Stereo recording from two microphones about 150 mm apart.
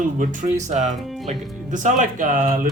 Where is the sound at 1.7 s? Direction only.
55° right (ahead or behind).